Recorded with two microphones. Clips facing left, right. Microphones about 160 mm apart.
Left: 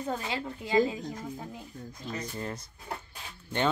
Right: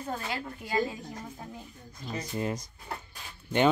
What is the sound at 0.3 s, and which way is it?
Speech, 20° left (ahead or behind).